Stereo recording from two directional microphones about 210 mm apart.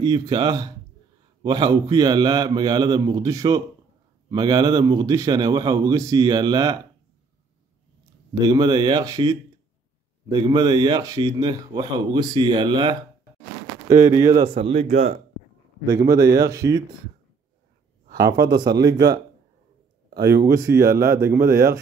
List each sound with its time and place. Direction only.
0.0 s a man's voice: 20° right (ahead or behind)
8.5 s a man's voice: 20° right (ahead or behind)
15.9 s a man's voice: 15° right (ahead or behind)
18.1 s a man's voice: 15° right (ahead or behind)
20.4 s a man's voice: 15° right (ahead or behind)